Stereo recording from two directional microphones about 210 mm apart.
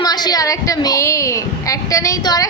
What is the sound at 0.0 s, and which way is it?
A woman's voice, 20° left (ahead or behind).